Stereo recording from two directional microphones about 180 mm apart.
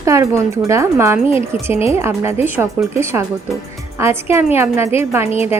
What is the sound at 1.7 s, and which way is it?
Speech, 35° left (ahead or behind).